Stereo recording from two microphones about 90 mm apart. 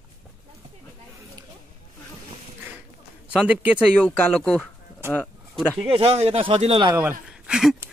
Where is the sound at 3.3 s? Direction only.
15° right (ahead or behind).